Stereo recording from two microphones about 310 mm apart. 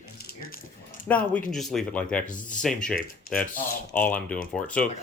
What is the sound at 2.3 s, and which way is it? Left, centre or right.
Speech, left.